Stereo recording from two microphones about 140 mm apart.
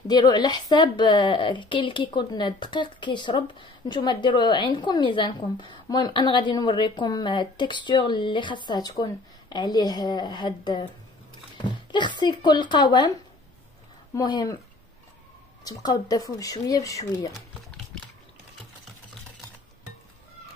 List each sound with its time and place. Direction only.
0.1 s a woman's voice: 30° left (ahead or behind)
14.1 s speech: 30° left (ahead or behind)
15.6 s speech: 25° left (ahead or behind)